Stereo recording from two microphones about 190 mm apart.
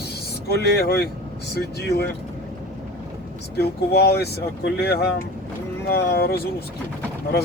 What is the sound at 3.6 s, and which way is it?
Speech, 60° left (ahead or behind).